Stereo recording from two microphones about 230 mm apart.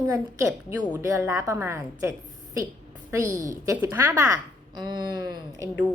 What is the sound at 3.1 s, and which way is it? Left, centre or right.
A woman's voice, centre.